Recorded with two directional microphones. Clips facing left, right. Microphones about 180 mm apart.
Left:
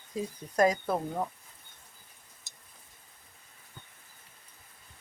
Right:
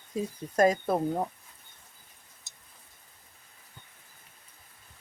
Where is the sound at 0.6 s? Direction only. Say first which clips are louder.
Right 2 dB; 25° right (ahead or behind).